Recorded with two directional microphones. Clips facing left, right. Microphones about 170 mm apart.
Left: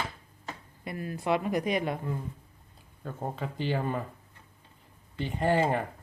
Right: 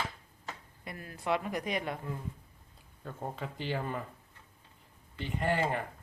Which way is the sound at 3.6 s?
40° left (ahead or behind).